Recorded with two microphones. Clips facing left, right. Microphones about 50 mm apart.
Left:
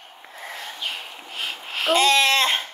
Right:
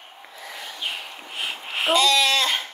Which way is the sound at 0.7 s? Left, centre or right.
Centre.